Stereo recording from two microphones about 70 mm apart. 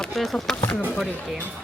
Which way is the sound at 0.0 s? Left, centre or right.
Centre.